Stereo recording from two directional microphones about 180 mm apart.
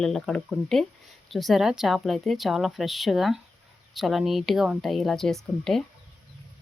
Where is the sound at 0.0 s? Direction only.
Centre (ahead or behind).